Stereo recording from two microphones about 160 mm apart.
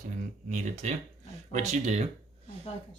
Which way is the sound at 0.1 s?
50° right (ahead or behind).